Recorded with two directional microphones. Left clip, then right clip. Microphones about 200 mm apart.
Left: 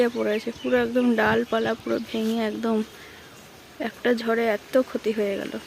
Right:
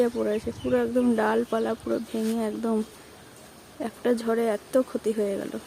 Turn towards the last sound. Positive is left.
turn(degrees=0)  # may be behind; listen again after turning